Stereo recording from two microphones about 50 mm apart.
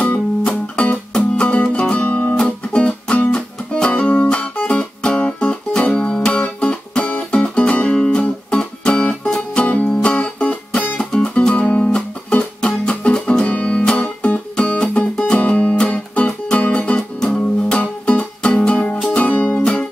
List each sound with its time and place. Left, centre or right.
0.0 s music: left
1.1 s music: centre
1.5 s music: left
2.3 s music: centre
11.0 s music: centre
11.3 s music: left
15.3 s music: left
19.0 s music: left
19.6 s music: centre